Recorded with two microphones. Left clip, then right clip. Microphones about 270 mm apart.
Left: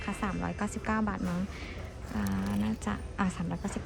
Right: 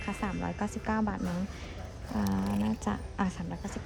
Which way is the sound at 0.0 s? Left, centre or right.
Centre.